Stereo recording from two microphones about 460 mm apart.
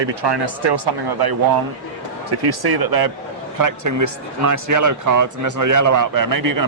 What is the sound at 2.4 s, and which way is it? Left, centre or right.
Speech, right.